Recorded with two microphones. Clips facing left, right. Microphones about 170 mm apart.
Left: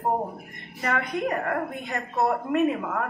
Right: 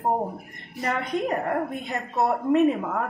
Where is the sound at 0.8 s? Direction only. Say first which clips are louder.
Right 1 dB; 20° right (ahead or behind).